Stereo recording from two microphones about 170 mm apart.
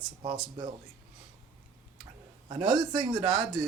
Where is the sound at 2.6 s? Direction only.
30° right (ahead or behind).